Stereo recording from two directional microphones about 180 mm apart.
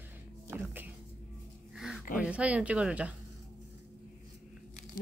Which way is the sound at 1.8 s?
Centre (ahead or behind).